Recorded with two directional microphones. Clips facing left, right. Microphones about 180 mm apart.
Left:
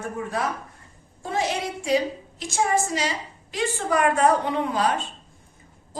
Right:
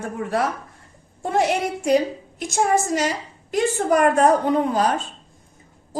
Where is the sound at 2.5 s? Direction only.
50° right (ahead or behind).